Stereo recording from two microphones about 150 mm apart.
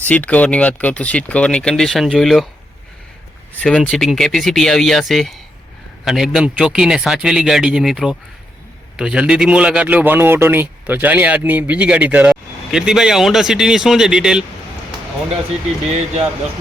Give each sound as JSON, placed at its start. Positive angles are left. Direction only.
{"t": 0.0, "sound": "speech", "side_deg": 10}
{"t": 3.5, "sound": "a man's voice", "side_deg": 5}
{"t": 15.9, "sound": "speech", "side_deg": -50}